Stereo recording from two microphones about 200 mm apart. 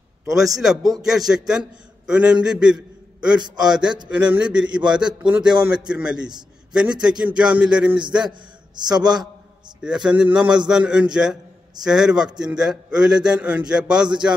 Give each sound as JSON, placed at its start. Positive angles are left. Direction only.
{"t": 0.3, "sound": "a man's voice", "side_deg": 0}
{"t": 3.3, "sound": "a man's voice", "side_deg": -20}
{"t": 4.2, "sound": "a man's voice", "side_deg": -5}
{"t": 8.3, "sound": "a man's voice", "side_deg": -20}
{"t": 9.8, "sound": "a man's voice", "side_deg": -5}